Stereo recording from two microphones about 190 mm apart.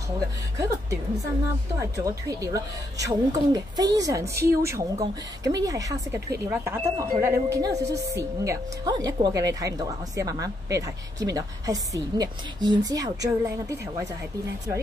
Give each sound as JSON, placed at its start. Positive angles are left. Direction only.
{"t": 0.6, "sound": "music", "side_deg": -15}
{"t": 1.8, "sound": "speech", "side_deg": -15}